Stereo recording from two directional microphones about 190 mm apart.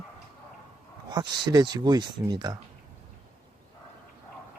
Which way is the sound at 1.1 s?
20° right (ahead or behind).